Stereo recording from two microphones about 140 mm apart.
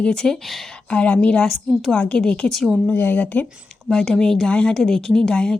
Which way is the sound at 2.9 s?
10° left (ahead or behind).